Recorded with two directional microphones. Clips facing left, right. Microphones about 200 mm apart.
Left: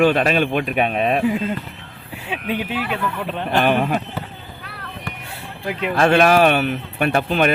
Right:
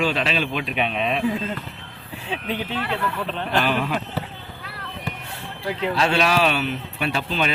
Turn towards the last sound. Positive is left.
turn(degrees=55)  # may be behind; listen again after turning